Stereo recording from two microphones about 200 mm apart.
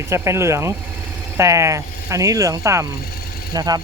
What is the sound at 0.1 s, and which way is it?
Speech, 15° right (ahead or behind).